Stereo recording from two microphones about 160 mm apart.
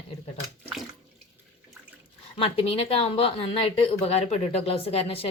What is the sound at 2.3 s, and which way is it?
Speech, 35° left (ahead or behind).